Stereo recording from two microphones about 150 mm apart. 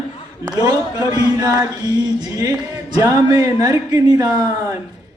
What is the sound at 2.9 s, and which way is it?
Music, 25° right (ahead or behind).